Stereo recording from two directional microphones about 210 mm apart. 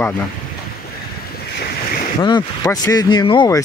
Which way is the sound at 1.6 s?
45° left (ahead or behind).